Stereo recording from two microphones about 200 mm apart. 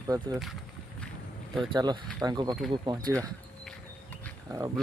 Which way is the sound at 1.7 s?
20° right (ahead or behind).